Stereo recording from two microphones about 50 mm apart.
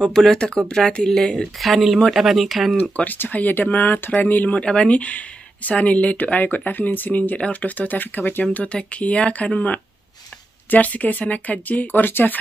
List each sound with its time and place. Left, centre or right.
0.1 s speech: centre
2.8 s speech: left
4.6 s speech: left
7.3 s speech: left
7.7 s speech: left
8.7 s speech: left